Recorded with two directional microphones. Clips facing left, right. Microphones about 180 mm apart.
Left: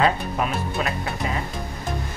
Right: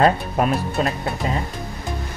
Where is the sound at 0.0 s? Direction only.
45° right (ahead or behind).